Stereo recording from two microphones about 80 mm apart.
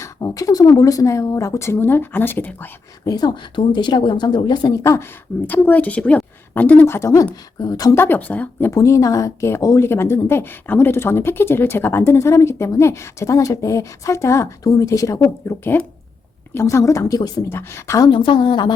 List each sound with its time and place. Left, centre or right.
0.0 s speech: left
3.1 s speech: left
4.7 s speech: left
5.5 s a woman's voice: left
6.8 s speech: left
7.6 s speech: left
7.9 s a woman's voice: left
8.7 s speech: left
9.8 s speech: left
17.5 s speech: left
18.1 s a woman's voice: left